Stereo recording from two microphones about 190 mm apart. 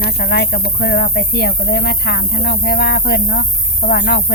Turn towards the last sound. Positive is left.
turn(degrees=60)  # may be behind; listen again after turning